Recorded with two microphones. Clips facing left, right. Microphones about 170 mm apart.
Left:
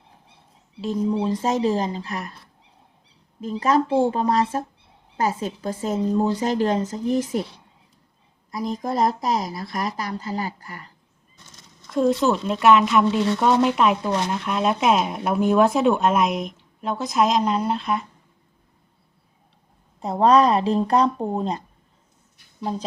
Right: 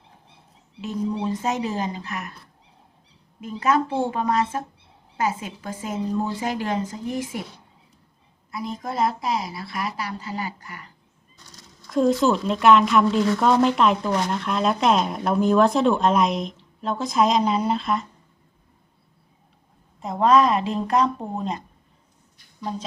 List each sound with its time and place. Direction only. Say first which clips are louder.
1.2 s speech: left 4 dB; 30° left (ahead or behind)
4.1 s speech: left 2 dB; 35° left (ahead or behind)
8.4 s speech: left 4 dB; 40° left (ahead or behind)
11.4 s a sound: right 2 dB; 20° left (ahead or behind)
11.9 s speech: even; centre (ahead or behind)
20.0 s speech: left 1 dB; 35° left (ahead or behind)